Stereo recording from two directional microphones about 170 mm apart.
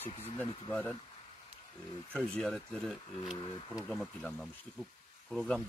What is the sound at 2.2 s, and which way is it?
Speech, 5° left (ahead or behind).